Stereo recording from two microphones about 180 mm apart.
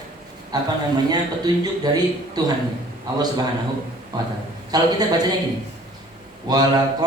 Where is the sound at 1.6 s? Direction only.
20° right (ahead or behind).